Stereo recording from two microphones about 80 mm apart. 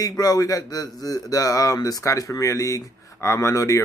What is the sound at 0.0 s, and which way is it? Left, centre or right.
Speech, left.